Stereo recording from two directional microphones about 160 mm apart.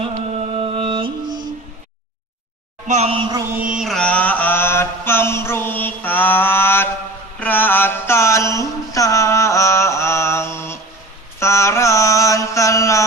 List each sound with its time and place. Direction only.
0.0 s music: 35° right (ahead or behind)
2.8 s a woman's voice: 45° right (ahead or behind)
3.5 s mantra: 5° right (ahead or behind); by 13.0 s 20° left (ahead or behind)